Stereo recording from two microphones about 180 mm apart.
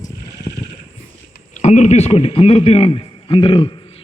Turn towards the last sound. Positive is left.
turn(degrees=25)  # may be behind; listen again after turning